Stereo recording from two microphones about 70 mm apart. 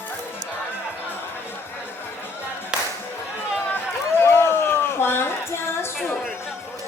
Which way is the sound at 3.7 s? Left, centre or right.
Left.